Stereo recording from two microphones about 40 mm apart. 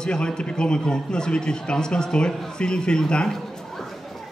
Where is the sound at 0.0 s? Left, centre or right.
Left.